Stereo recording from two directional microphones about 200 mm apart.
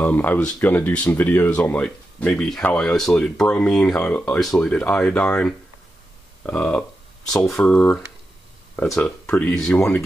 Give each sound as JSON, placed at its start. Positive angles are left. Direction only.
{"t": 0.0, "sound": "speech", "side_deg": 10}